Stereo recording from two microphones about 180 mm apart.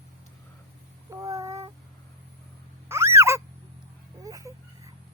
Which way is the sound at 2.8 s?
15° right (ahead or behind).